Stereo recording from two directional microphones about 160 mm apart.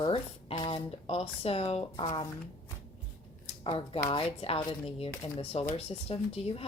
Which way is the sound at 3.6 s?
35° left (ahead or behind).